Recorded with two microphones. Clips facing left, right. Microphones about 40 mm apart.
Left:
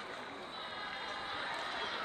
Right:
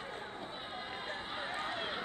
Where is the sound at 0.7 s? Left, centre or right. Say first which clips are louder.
Left 2 dB; centre.